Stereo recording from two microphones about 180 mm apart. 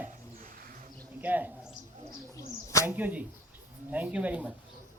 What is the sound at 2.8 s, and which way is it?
Speech, 10° right (ahead or behind).